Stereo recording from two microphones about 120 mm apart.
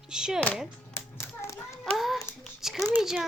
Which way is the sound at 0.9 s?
20° left (ahead or behind).